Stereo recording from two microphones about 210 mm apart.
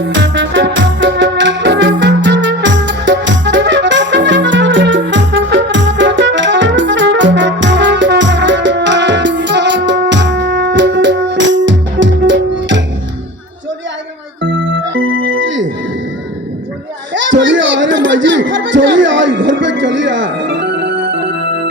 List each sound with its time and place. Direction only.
0.0 s music: 60° right (ahead or behind)
14.4 s music: 60° right (ahead or behind)
17.2 s children playing: 60° right (ahead or behind)